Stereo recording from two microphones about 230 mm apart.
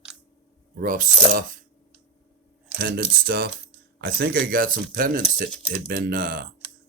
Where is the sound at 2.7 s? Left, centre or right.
Right.